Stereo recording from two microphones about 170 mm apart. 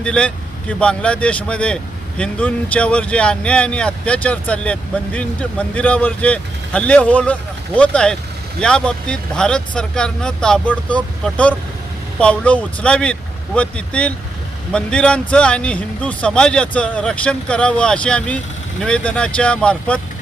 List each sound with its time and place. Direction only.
0.0 s speech: 5° left (ahead or behind)